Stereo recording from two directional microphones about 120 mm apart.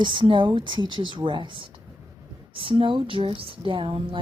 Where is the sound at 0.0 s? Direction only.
40° right (ahead or behind).